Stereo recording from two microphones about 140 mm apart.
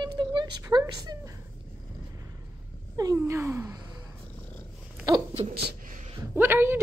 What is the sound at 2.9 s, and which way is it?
Speech, 25° right (ahead or behind).